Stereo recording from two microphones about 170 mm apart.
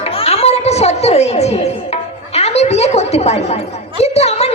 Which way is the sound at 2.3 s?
40° left (ahead or behind).